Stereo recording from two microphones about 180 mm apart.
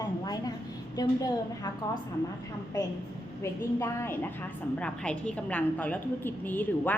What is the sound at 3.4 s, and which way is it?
A woman's voice, 15° left (ahead or behind).